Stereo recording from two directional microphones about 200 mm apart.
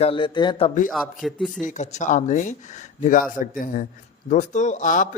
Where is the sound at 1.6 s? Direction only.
35° left (ahead or behind).